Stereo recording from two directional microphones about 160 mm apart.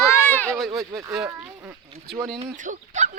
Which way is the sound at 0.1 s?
10° left (ahead or behind).